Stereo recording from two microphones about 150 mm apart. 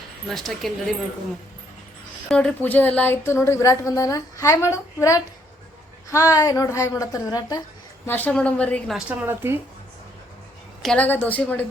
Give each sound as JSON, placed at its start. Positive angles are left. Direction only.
{"t": 0.3, "sound": "speech", "side_deg": 0}
{"t": 2.3, "sound": "speech", "side_deg": 5}
{"t": 6.3, "sound": "a woman's voice", "side_deg": 25}
{"t": 8.0, "sound": "speech", "side_deg": 10}
{"t": 9.0, "sound": "speech", "side_deg": -10}
{"t": 10.8, "sound": "speech", "side_deg": 10}